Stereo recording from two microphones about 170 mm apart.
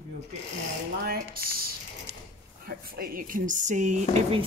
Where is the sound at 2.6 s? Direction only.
60° right (ahead or behind); by 4.4 s 40° right (ahead or behind).